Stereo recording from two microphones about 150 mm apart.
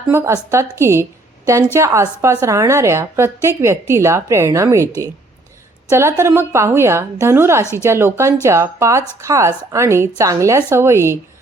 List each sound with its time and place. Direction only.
0.1 s a woman's voice: 15° right (ahead or behind)
5.9 s a woman's voice: 20° right (ahead or behind)
7.6 s speech: 20° left (ahead or behind)
7.9 s a woman's voice: 15° right (ahead or behind)